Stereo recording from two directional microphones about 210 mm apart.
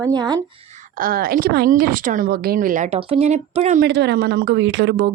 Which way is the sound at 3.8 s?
55° right (ahead or behind).